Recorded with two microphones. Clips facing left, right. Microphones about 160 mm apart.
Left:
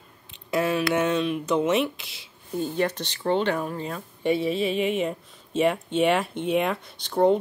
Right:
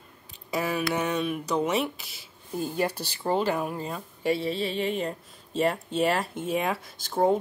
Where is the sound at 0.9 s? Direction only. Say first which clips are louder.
Left 4 dB; centre (ahead or behind).